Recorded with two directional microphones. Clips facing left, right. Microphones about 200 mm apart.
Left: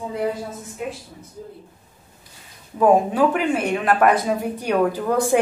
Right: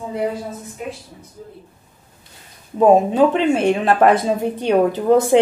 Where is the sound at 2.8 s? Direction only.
25° right (ahead or behind).